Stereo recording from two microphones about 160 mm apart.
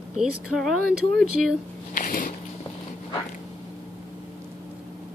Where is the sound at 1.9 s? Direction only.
55° left (ahead or behind).